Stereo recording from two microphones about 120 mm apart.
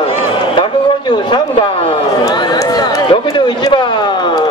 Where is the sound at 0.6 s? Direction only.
40° left (ahead or behind).